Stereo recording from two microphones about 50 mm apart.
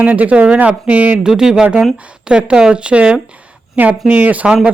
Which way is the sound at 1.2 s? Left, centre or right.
Centre.